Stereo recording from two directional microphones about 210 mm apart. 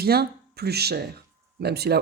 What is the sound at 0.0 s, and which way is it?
Speech, 50° right (ahead or behind).